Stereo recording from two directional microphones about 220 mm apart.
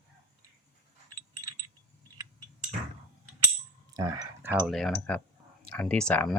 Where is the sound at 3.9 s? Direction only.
15° right (ahead or behind).